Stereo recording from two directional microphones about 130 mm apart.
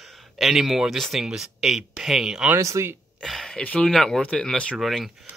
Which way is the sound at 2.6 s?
25° right (ahead or behind).